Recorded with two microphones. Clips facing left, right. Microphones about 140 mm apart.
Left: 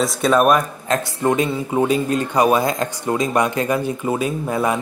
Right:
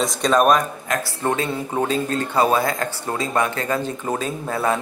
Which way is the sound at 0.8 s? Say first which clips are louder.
Left 4 dB; 25° left (ahead or behind).